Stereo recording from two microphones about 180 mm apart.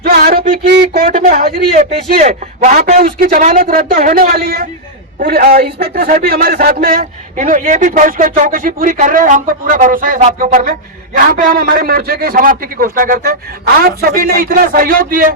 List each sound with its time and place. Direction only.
0.0 s a sound: 55° right (ahead or behind)
0.8 s speech: 55° right (ahead or behind)
3.0 s a man's voice: 55° right (ahead or behind)